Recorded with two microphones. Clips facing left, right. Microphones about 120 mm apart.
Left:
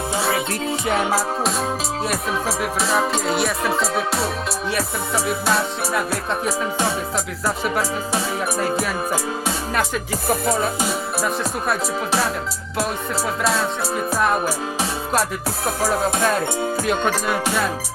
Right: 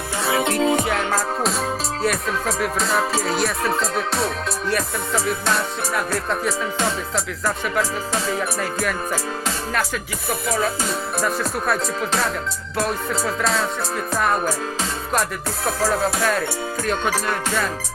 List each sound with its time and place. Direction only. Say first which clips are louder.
0.4 s music: right 6 dB; 90° right
0.9 s music: left 2 dB; 10° left (ahead or behind)
10.8 s music: even; 5° left (ahead or behind)
13.4 s music: left 1 dB; 5° left (ahead or behind)
15.8 s music: left 1 dB; 20° left (ahead or behind)
16.8 s music: right 1 dB; centre (ahead or behind)